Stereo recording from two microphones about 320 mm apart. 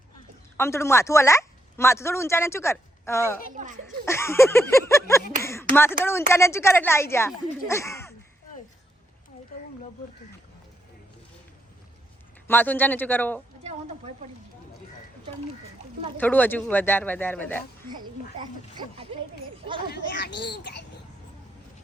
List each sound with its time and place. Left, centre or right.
0.5 s speech: centre
3.5 s speech: right
3.8 s speech: centre
12.5 s speech: centre
16.1 s speech: centre
17.8 s speech: centre
19.9 s a child's voice: left